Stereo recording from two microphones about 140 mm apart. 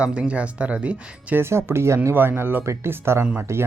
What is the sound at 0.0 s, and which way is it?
Speech, 10° right (ahead or behind).